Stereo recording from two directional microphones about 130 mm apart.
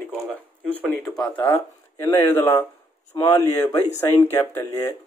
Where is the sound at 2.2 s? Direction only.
15° left (ahead or behind).